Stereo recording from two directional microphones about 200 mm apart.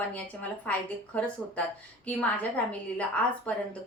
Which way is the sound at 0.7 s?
5° left (ahead or behind).